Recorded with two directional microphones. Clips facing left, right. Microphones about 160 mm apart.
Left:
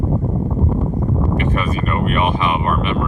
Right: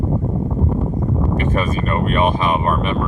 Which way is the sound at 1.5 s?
35° right (ahead or behind).